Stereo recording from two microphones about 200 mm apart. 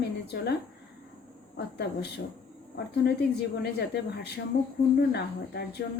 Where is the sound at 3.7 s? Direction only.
55° left (ahead or behind).